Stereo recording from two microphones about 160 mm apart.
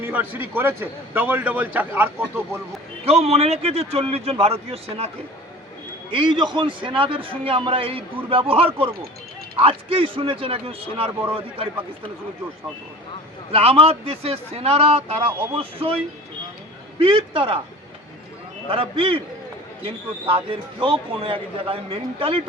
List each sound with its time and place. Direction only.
0.0 s a man's voice: 10° right (ahead or behind)
3.0 s a man's voice: 40° right (ahead or behind)
13.5 s a man's voice: 35° right (ahead or behind)
17.0 s a man's voice: 35° right (ahead or behind)
18.7 s a man's voice: 35° right (ahead or behind)